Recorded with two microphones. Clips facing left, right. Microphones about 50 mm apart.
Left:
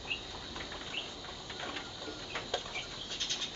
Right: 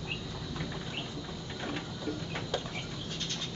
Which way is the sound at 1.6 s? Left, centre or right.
Centre.